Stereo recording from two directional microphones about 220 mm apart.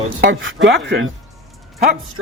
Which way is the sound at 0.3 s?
55° right (ahead or behind).